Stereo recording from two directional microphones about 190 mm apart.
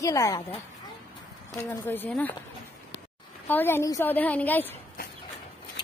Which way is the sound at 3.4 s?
10° left (ahead or behind).